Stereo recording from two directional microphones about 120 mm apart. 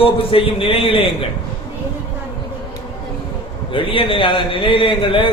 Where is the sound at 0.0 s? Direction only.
50° left (ahead or behind).